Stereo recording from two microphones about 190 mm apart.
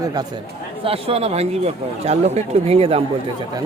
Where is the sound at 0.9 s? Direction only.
30° right (ahead or behind).